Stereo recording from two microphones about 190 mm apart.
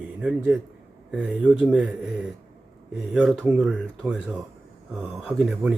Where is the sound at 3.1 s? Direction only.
5° right (ahead or behind).